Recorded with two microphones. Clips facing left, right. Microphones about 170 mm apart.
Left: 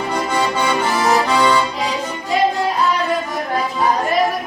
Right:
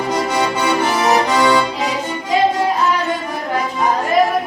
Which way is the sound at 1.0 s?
20° right (ahead or behind).